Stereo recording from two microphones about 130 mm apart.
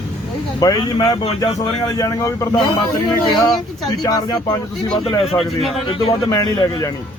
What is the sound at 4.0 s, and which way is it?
Speech, 30° left (ahead or behind).